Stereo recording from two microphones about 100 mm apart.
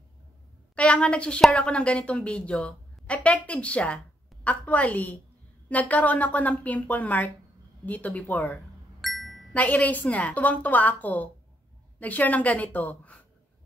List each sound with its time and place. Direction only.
0.7 s a woman's voice: 10° left (ahead or behind)
9.0 s music: centre (ahead or behind)
9.5 s a woman's voice: 15° left (ahead or behind)